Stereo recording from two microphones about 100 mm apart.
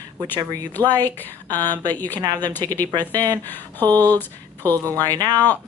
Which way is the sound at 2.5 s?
20° left (ahead or behind).